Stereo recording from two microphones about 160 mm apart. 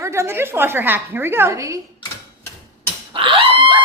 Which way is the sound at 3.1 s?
30° right (ahead or behind).